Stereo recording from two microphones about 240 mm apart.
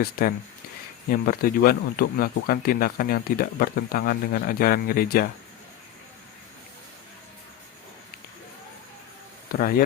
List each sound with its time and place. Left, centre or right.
0.0 s speech: left
9.5 s speech: left